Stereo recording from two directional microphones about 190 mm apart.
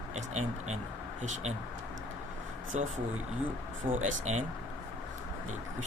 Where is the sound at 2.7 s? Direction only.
35° right (ahead or behind).